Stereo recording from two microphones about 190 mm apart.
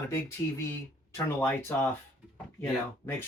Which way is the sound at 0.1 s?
15° left (ahead or behind).